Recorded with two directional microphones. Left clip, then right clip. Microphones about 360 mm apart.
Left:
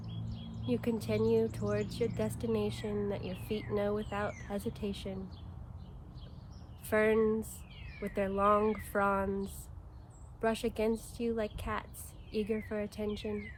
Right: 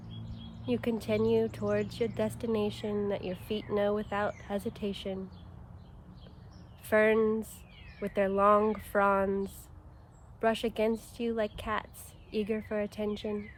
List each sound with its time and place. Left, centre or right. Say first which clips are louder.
0.7 s speech: right 3 dB; right
6.9 s speech: right 3 dB; right